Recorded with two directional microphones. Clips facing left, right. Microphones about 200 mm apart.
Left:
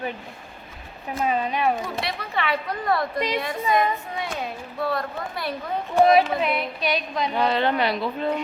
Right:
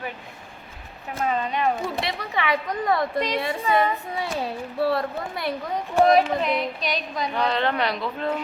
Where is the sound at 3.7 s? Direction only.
35° right (ahead or behind).